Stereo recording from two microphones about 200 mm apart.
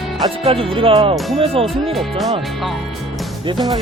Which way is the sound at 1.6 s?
Centre (ahead or behind).